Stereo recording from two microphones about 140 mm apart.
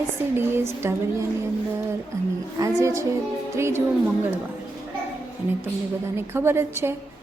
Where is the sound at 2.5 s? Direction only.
25° right (ahead or behind).